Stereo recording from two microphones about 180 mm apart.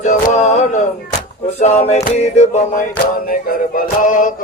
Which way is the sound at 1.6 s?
35° left (ahead or behind).